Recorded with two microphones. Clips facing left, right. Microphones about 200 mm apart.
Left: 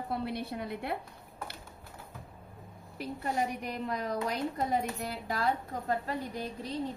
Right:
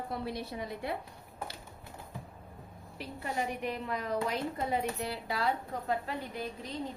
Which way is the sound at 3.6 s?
40° left (ahead or behind).